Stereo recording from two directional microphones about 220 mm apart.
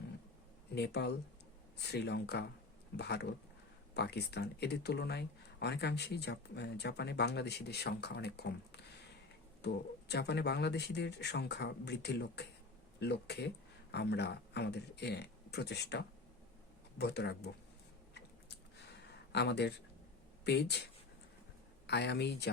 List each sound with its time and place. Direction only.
0.8 s speech: 50° left (ahead or behind)
19.3 s speech: 50° left (ahead or behind)
21.8 s speech: 50° left (ahead or behind)